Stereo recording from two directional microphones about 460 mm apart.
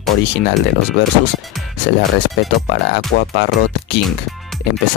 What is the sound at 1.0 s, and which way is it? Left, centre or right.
Speech, left.